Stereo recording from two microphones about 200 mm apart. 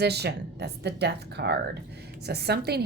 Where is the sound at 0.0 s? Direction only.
55° right (ahead or behind).